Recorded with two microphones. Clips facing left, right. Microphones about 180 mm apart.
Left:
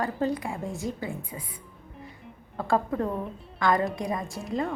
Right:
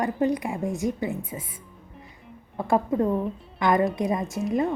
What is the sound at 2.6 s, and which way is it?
Speech, 20° right (ahead or behind).